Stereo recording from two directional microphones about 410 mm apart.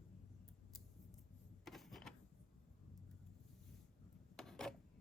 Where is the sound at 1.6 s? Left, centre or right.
Centre.